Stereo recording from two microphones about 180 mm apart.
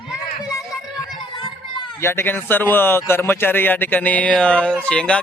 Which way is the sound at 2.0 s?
15° left (ahead or behind).